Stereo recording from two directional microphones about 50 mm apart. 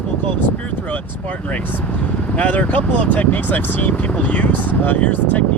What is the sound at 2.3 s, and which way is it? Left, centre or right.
Speech, left.